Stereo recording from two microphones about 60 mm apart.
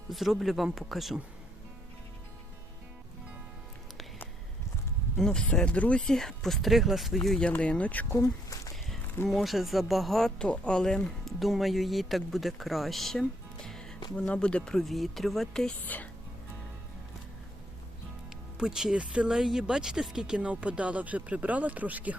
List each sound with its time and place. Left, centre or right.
0.1 s speech: centre
5.1 s speech: centre
6.1 s speech: centre
7.2 s speech: centre
7.5 s speech: left
8.2 s a sound: left
9.2 s speech: centre
11.3 s speech: centre
15.9 s speech: left
18.5 s speech: centre; by 22.1 s right